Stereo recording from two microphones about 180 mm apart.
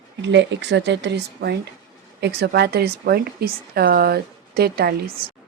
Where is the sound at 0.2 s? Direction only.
80° right; by 5.1 s 60° right (ahead or behind).